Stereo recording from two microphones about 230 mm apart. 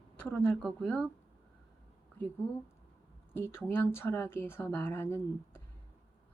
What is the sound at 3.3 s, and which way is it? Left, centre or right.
Speech, centre.